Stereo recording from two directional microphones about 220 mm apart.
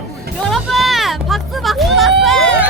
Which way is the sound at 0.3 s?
Centre (ahead or behind).